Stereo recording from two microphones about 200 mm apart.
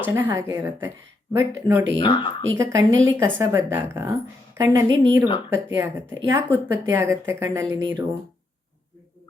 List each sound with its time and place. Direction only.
0.0 s a woman's voice: 15° right (ahead or behind)
2.0 s speech: 25° left (ahead or behind)
2.6 s a woman's voice: 15° right (ahead or behind)